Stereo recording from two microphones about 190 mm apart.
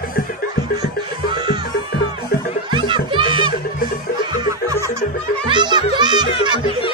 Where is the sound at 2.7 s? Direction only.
25° right (ahead or behind).